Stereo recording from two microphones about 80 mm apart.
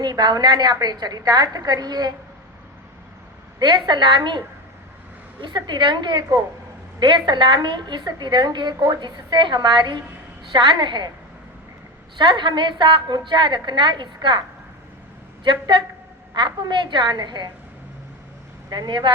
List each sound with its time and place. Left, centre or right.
0.0 s a woman's voice: right
3.6 s a woman's voice: right
7.0 s a woman's voice: right
12.1 s a woman's voice: right
16.3 s a woman's voice: right
18.7 s a woman's voice: right